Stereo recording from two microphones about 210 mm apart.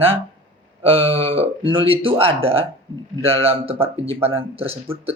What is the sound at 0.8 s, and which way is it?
Speech, 25° right (ahead or behind).